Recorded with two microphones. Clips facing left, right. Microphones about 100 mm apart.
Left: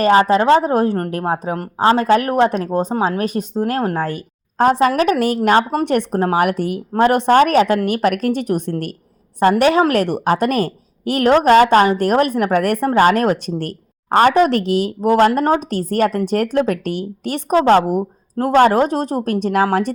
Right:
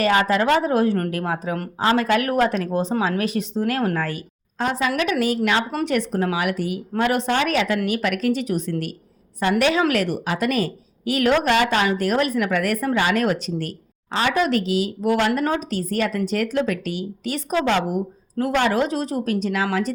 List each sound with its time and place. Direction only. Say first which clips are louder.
0.0 s a woman's voice: left 6 dB; 35° left (ahead or behind)
3.0 s a woman's voice: left 4 dB; 40° left (ahead or behind)
6.9 s a woman's voice: left 9 dB; 40° left (ahead or behind)
9.4 s a woman's voice: left 6 dB; 45° left (ahead or behind)
12.9 s a woman's voice: left 8 dB; 45° left (ahead or behind)
13.6 s a woman's voice: left 3 dB; 50° left (ahead or behind)
15.1 s a woman's voice: left 8 dB; 40° left (ahead or behind)
15.7 s a woman's voice: left 6 dB; 50° left (ahead or behind)